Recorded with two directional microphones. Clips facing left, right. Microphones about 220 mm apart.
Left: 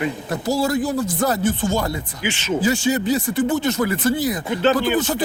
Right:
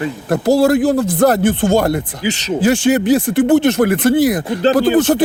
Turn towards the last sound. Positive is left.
turn(degrees=-75)  # may be behind; listen again after turning